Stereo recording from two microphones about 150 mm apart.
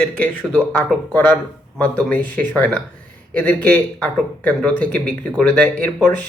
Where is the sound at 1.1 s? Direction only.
10° left (ahead or behind).